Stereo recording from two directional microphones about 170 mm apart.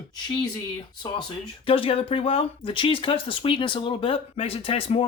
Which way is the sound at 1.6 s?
30° left (ahead or behind).